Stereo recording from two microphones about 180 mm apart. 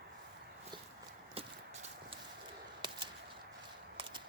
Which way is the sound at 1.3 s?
30° right (ahead or behind).